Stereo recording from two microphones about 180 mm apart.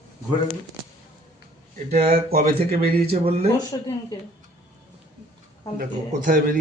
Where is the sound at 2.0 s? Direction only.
60° right (ahead or behind).